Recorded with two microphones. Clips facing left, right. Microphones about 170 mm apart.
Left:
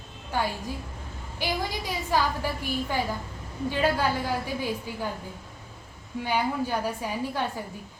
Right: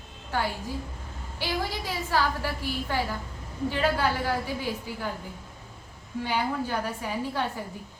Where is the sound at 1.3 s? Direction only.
15° left (ahead or behind).